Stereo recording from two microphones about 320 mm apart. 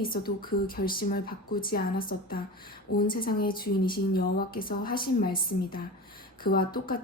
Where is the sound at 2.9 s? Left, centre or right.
Left.